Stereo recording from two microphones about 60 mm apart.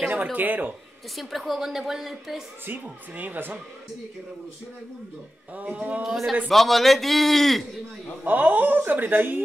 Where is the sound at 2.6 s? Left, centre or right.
Right.